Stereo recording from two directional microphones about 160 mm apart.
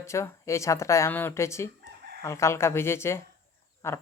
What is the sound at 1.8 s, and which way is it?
Chicken, 90° right.